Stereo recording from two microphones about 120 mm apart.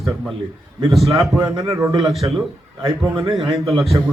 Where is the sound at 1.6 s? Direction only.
25° right (ahead or behind).